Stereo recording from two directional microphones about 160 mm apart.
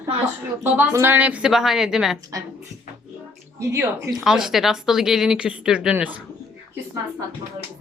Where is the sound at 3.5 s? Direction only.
15° right (ahead or behind).